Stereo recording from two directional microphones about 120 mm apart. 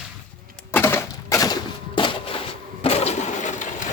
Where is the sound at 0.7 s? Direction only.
20° left (ahead or behind); by 2.4 s 45° left (ahead or behind).